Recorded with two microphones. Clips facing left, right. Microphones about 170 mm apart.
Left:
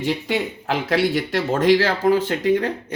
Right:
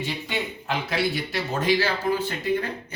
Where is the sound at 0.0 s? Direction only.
90° left.